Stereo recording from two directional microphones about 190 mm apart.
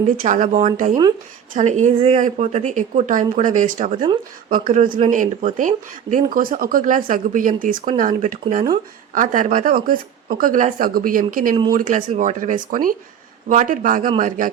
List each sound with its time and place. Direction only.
0.2 s a woman's voice: 40° right (ahead or behind)